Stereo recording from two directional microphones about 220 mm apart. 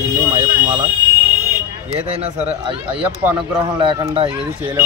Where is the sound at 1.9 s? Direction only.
30° right (ahead or behind).